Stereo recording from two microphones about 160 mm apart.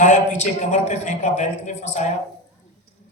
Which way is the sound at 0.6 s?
50° left (ahead or behind).